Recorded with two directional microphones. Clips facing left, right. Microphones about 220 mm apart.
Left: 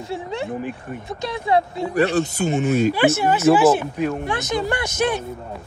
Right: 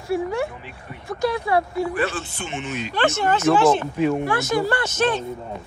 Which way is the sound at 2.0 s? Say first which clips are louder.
Left 7 dB; 40° left (ahead or behind).